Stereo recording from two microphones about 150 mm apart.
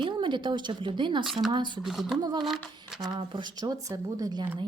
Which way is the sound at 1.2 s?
Centre (ahead or behind).